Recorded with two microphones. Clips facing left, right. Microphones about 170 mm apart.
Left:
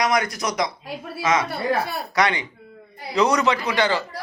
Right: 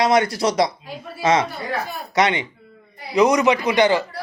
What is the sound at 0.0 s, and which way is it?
A man's voice, 30° right (ahead or behind).